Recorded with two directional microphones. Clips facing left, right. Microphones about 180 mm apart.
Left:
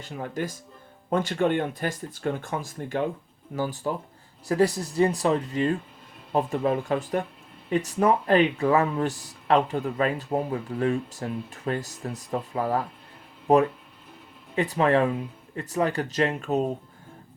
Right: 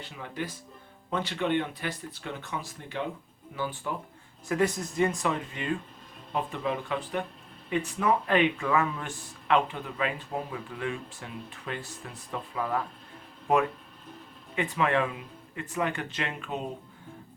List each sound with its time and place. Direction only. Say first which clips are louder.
0.0 s speech: left 5 dB; 45° left (ahead or behind)
14.5 s speech: left 5 dB; 35° left (ahead or behind)